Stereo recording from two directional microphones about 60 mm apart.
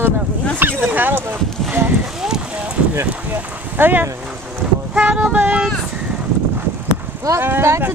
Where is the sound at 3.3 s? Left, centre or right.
Right.